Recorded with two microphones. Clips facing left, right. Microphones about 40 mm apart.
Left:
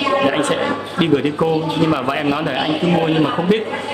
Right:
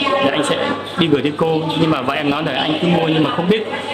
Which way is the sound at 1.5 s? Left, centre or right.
Right.